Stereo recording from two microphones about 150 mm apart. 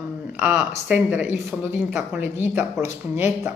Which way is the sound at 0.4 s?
10° right (ahead or behind).